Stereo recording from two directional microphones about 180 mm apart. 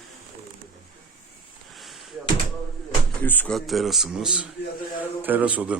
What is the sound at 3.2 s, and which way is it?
Speech, 10° left (ahead or behind).